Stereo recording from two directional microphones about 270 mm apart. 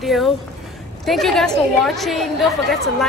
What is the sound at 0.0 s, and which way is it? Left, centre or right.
A man's voice, centre.